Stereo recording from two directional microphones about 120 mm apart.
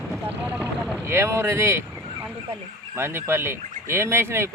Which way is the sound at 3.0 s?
20° right (ahead or behind).